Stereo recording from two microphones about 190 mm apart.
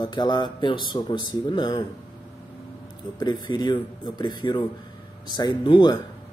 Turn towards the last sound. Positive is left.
turn(degrees=25)  # may be behind; listen again after turning